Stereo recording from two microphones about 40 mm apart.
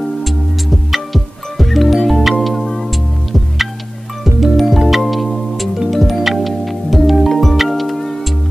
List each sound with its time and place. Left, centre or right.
0.2 s music: centre
4.2 s music: centre